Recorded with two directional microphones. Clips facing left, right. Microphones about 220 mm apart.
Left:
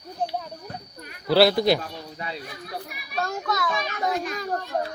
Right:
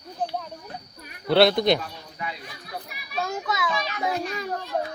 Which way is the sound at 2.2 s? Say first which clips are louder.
Right 1 dB; 35° left (ahead or behind).